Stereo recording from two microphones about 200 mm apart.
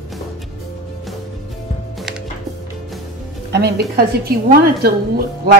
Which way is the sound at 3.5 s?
55° right (ahead or behind).